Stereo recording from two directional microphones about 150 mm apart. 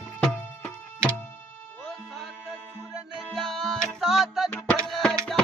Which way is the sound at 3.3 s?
Centre (ahead or behind).